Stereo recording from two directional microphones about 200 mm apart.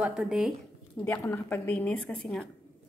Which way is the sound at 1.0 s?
10° left (ahead or behind).